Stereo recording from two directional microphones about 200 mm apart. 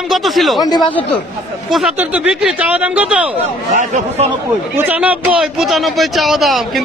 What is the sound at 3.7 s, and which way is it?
Speech, 35° right (ahead or behind).